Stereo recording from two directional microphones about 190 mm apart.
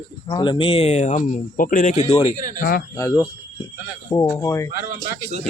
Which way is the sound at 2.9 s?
15° left (ahead or behind).